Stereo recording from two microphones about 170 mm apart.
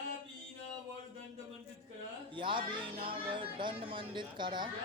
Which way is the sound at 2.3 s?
30° right (ahead or behind).